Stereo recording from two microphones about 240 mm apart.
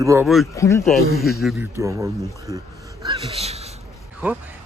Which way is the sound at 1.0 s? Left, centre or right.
Right.